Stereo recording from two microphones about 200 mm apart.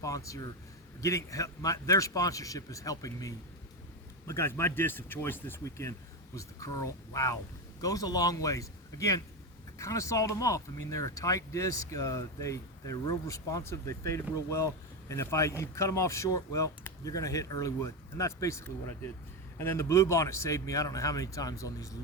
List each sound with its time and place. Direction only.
0.0 s speech: 15° left (ahead or behind)